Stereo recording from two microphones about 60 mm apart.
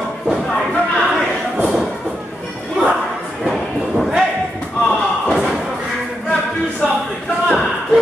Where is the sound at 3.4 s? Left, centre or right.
Centre.